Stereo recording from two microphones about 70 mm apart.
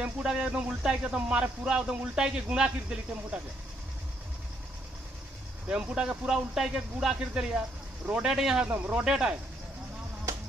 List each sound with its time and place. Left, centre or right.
0.0 s speech: centre
5.7 s speech: centre
8.6 s speech: right
9.0 s speech: centre